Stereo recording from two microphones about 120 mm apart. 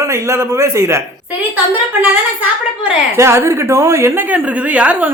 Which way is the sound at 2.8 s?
20° right (ahead or behind).